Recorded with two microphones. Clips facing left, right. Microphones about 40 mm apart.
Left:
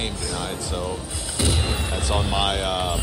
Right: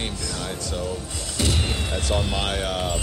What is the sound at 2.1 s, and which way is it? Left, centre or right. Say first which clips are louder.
Speech: left 3 dB; centre.